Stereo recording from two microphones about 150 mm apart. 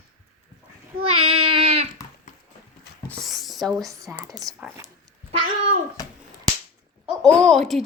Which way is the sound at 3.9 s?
20° right (ahead or behind).